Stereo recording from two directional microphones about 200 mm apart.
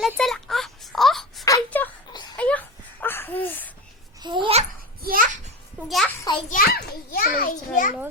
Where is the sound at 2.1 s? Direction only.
20° left (ahead or behind).